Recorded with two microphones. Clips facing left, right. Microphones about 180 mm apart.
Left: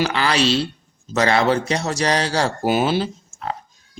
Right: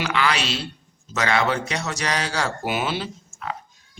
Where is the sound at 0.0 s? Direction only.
35° left (ahead or behind).